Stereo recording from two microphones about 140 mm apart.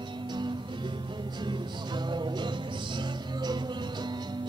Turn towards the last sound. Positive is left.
turn(degrees=-30)  # may be behind; listen again after turning